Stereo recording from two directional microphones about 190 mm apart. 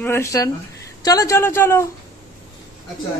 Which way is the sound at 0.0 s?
15° left (ahead or behind).